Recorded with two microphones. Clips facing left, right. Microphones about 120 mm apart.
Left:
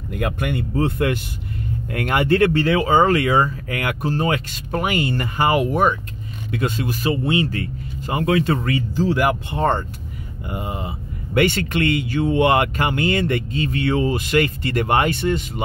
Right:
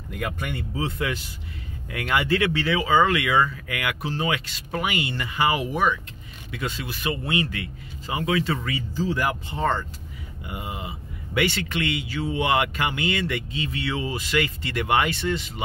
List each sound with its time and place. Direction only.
0.2 s speech: 55° left (ahead or behind)
7.0 s speech: 30° left (ahead or behind)
7.5 s speech: 45° left (ahead or behind)